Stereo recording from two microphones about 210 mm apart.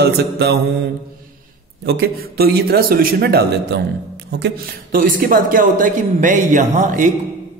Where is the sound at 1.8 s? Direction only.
50° right (ahead or behind).